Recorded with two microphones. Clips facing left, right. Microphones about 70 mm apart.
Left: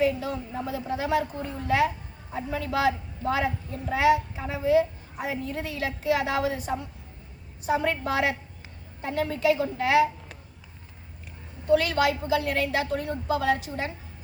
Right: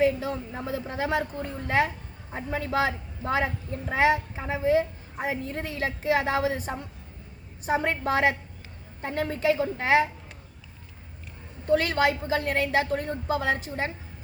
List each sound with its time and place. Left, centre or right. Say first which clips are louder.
0.0 s a woman's voice: right 1 dB; right
11.7 s a woman's voice: left 1 dB; right